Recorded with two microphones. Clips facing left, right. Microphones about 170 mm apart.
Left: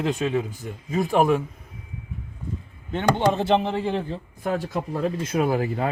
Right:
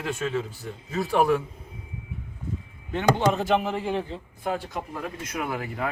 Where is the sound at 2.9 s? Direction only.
25° left (ahead or behind).